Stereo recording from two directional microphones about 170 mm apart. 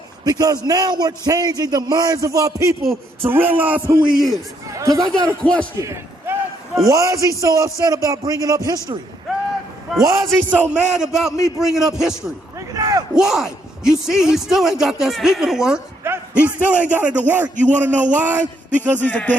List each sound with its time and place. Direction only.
0.3 s a man's voice: 20° right (ahead or behind)
5.4 s a woman's voice: 5° left (ahead or behind)
5.7 s a sound: 15° right (ahead or behind)
6.8 s a man's voice: 20° right (ahead or behind)
10.0 s a man's voice: 20° right (ahead or behind); by 12.1 s centre (ahead or behind)
12.5 s a sound: 20° right (ahead or behind)
13.1 s a woman's voice: centre (ahead or behind)
18.1 s a sound: 10° right (ahead or behind)
18.9 s speech: 10° left (ahead or behind)